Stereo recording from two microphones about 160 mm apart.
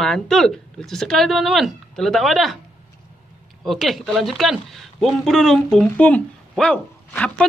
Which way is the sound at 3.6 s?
Centre (ahead or behind).